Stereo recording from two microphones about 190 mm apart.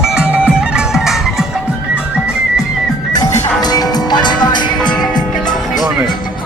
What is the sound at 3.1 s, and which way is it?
Music, 20° left (ahead or behind).